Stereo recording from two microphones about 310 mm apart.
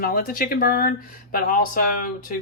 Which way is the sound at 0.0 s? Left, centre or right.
Left.